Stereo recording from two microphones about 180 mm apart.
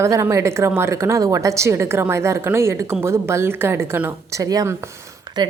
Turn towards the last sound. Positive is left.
turn(degrees=-25)  # may be behind; listen again after turning